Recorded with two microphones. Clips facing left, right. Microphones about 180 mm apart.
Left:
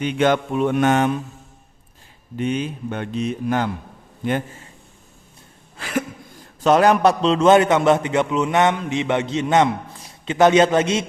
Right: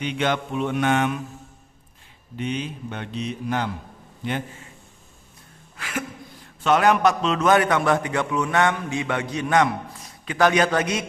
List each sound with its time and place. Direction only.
0.0 s speech: 45° left (ahead or behind)
2.4 s speech: 50° left (ahead or behind)
5.7 s a sound: 35° left (ahead or behind)
6.6 s a man's voice: 35° left (ahead or behind)